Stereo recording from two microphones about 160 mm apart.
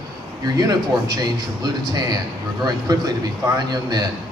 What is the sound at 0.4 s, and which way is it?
Speech, 25° right (ahead or behind).